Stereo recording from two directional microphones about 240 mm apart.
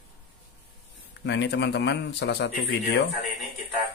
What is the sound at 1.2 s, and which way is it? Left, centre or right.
Speech, left.